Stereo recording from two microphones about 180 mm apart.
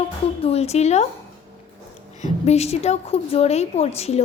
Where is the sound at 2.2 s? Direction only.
35° left (ahead or behind).